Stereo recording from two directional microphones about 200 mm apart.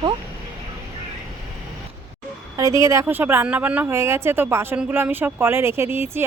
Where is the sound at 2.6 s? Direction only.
15° right (ahead or behind).